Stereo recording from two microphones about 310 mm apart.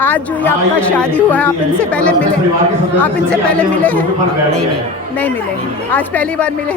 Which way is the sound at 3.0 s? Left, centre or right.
Centre.